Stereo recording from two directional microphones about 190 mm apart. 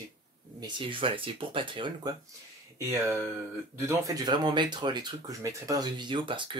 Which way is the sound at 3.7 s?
15° right (ahead or behind).